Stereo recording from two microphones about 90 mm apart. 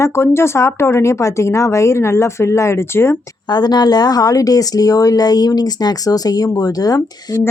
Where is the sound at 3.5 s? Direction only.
50° left (ahead or behind).